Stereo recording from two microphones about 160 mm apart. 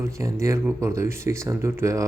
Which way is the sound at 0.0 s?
20° right (ahead or behind).